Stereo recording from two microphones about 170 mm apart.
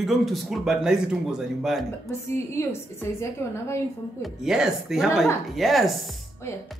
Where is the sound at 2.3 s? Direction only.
15° left (ahead or behind).